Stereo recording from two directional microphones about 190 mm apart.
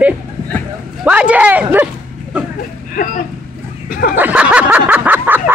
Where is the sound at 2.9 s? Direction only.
45° left (ahead or behind).